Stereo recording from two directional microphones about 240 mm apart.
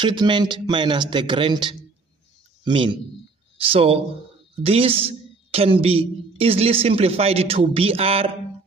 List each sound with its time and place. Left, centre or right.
0.0 s a woman's voice: centre